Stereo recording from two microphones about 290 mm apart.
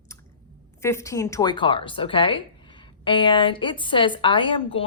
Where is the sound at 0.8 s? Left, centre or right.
Centre.